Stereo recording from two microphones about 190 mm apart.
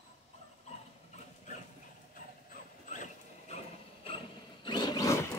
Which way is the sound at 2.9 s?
40° left (ahead or behind).